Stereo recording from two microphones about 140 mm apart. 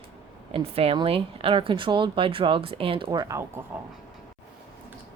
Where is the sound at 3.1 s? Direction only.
25° right (ahead or behind).